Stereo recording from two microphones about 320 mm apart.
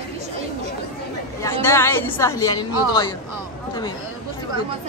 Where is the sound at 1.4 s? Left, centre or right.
Centre.